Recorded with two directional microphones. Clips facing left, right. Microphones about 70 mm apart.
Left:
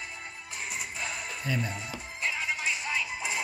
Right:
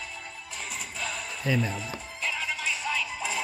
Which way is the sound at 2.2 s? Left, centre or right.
Centre.